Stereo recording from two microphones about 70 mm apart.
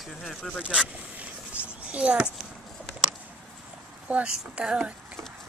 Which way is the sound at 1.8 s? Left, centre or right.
Centre.